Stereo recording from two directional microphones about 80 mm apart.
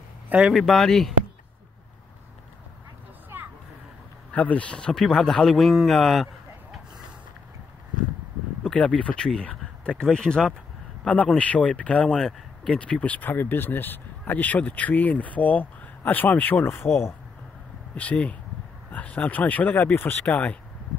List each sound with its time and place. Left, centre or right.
0.3 s speech: centre
0.6 s a man's voice: centre
4.3 s a man's voice: centre
8.6 s speech: centre; by 17.1 s left
17.9 s speech: centre